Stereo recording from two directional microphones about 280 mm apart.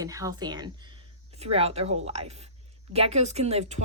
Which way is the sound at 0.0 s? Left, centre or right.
Centre.